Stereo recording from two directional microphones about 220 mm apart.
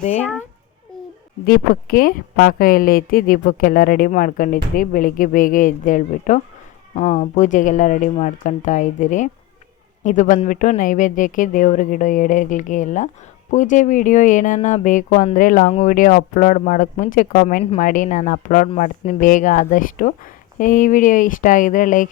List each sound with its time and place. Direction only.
0.2 s a child's voice: 5° left (ahead or behind)
1.5 s speech: 40° left (ahead or behind)